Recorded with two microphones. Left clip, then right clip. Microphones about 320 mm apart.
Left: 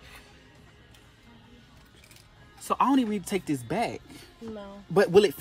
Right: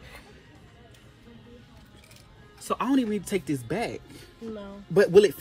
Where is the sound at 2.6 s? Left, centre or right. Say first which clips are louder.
Left 2 dB; left.